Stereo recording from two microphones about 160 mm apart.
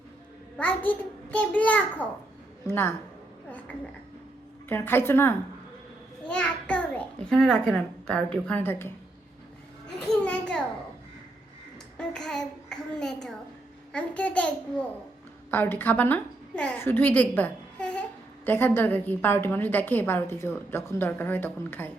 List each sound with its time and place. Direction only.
0.5 s a woman's voice: 10° left (ahead or behind)
4.7 s a woman's voice: 15° left (ahead or behind)
10.1 s children playing: 5° left (ahead or behind)
11.9 s child singing: 5° left (ahead or behind)
13.9 s a woman's voice: 10° left (ahead or behind)